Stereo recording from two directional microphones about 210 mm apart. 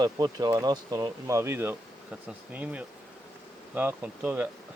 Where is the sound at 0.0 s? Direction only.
20° right (ahead or behind).